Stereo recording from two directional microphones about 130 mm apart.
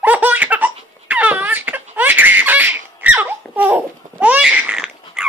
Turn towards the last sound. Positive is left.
turn(degrees=-5)  # may be behind; listen again after turning